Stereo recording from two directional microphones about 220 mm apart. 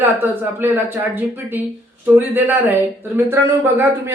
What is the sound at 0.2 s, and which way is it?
Speech, 10° right (ahead or behind).